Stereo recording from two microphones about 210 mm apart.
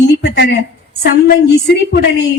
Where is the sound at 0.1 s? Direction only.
50° left (ahead or behind).